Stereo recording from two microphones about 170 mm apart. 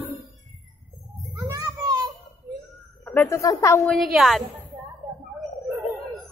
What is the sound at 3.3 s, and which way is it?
Speech, 20° left (ahead or behind).